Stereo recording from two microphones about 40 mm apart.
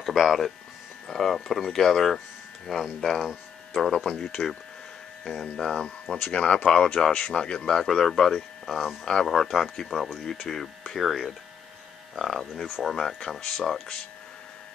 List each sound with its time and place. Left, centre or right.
0.0 s speech: centre
3.9 s speech: centre
6.3 s speech: left